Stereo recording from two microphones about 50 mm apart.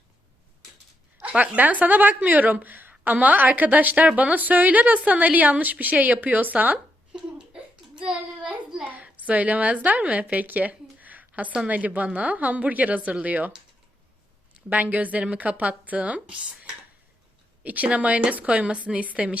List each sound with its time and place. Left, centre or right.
1.2 s a woman's voice: right
7.1 s a sound: centre
8.8 s a woman's voice: right
14.7 s a woman's voice: right